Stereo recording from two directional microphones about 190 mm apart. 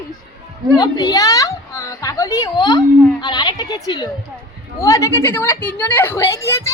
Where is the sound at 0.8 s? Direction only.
20° left (ahead or behind).